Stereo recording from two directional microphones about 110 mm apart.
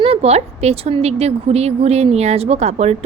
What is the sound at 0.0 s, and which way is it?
A woman's voice, 65° right (ahead or behind).